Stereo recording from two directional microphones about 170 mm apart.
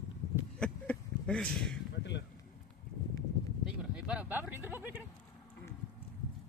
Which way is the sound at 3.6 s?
5° right (ahead or behind).